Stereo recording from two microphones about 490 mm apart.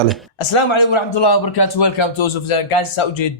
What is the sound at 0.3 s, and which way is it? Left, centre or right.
A man's voice, left.